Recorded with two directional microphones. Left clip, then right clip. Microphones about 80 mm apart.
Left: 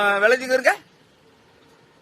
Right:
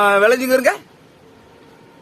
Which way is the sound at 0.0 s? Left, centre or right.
Right.